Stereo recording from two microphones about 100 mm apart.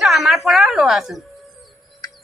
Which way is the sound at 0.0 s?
Centre (ahead or behind).